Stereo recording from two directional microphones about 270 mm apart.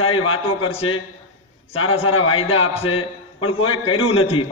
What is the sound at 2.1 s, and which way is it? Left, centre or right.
Speech, left.